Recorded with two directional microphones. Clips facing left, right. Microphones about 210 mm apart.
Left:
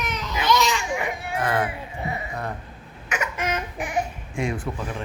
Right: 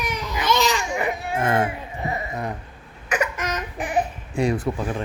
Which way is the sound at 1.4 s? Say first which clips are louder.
Right 2 dB; 25° right (ahead or behind).